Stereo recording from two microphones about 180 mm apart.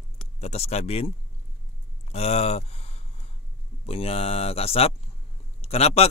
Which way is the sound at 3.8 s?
35° left (ahead or behind).